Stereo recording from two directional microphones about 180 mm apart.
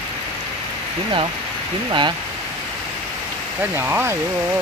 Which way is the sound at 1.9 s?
25° right (ahead or behind).